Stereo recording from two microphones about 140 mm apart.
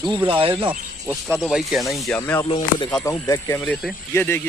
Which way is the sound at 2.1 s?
15° left (ahead or behind).